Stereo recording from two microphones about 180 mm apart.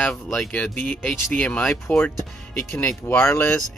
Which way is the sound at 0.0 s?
5° left (ahead or behind).